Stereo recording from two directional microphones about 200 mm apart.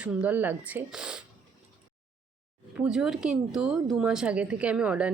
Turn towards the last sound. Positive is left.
turn(degrees=-5)  # may be behind; listen again after turning